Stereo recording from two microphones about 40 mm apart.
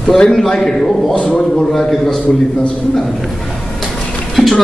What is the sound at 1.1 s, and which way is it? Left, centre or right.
Speech, left.